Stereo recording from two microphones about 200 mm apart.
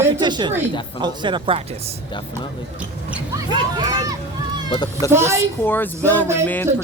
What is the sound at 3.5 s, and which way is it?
Speech, 20° right (ahead or behind).